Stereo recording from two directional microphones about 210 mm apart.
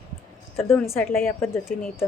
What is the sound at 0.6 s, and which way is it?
A woman's voice, 10° left (ahead or behind).